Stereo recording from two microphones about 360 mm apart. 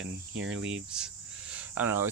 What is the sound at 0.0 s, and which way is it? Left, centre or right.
Speech, right.